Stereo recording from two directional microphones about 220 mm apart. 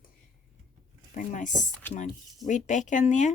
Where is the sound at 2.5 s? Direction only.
35° left (ahead or behind).